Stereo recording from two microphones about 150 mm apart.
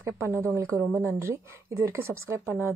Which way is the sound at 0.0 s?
15° right (ahead or behind).